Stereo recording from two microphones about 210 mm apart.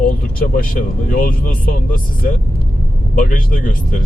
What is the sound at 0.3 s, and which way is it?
Speech, 40° left (ahead or behind).